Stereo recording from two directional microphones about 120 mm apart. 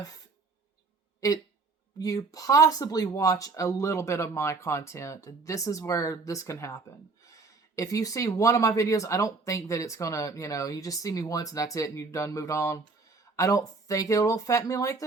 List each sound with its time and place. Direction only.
1.2 s speech: 30° left (ahead or behind)